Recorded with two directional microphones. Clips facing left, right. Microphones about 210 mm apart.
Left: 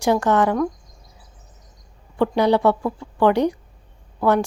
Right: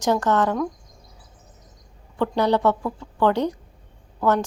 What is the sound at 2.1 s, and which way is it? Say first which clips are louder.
A woman's voice: left 3 dB; 10° left (ahead or behind).